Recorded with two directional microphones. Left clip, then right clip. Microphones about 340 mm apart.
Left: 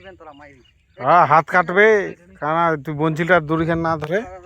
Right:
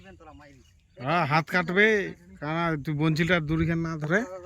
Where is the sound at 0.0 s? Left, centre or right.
Centre.